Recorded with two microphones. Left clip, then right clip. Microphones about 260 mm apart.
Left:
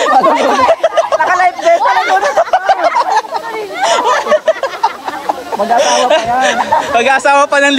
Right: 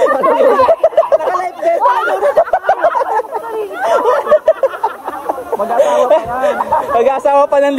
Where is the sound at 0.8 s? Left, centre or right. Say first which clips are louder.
Right 1 dB; centre.